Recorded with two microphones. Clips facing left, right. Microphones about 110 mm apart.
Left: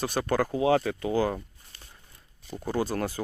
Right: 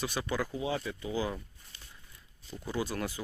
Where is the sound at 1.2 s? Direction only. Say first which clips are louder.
Left 7 dB; 50° left (ahead or behind).